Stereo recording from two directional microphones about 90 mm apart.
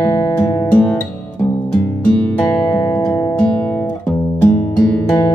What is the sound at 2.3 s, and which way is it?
Music, 10° left (ahead or behind).